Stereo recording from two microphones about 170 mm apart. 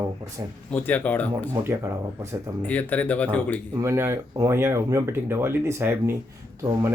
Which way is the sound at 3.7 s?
15° right (ahead or behind).